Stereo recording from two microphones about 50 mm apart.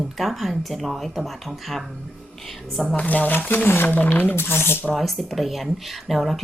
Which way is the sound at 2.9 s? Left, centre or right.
Left.